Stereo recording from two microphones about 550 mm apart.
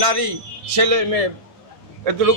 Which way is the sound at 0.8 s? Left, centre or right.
Right.